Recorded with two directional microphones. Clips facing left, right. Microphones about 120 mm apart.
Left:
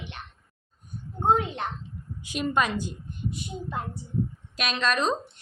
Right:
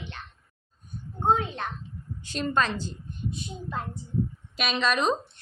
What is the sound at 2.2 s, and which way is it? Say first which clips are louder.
Speech: left 1 dB; 10° left (ahead or behind).